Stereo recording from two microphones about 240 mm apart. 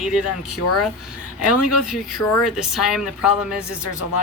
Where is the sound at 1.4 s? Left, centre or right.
Left.